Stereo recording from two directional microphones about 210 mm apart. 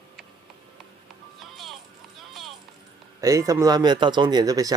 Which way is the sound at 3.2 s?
15° right (ahead or behind).